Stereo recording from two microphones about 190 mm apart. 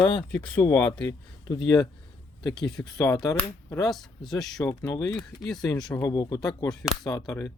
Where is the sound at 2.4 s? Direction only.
20° left (ahead or behind).